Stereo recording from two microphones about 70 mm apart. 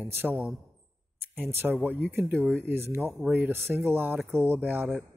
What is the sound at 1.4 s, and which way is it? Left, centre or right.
A man's voice, right.